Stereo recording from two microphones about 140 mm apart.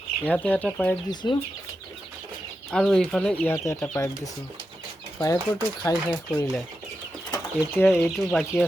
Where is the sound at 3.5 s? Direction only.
20° left (ahead or behind).